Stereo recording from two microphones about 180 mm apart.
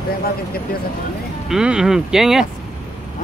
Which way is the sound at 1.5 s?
5° right (ahead or behind).